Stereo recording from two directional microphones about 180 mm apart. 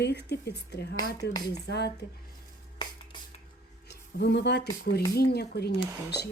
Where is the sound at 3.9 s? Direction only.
70° left (ahead or behind).